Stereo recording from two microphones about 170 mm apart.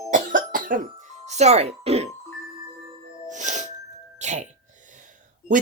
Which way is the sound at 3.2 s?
45° right (ahead or behind).